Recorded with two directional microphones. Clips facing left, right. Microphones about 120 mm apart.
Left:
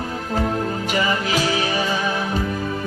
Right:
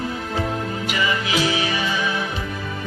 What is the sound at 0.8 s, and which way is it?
Music, 40° left (ahead or behind).